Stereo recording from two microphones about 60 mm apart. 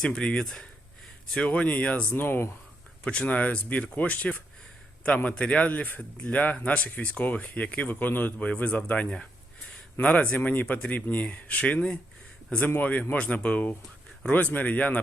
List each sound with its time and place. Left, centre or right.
0.0 s speech: centre
1.5 s speech: left
2.0 s speech: left
3.0 s speech: centre